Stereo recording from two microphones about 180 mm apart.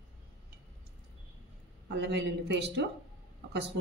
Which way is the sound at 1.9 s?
75° right (ahead or behind).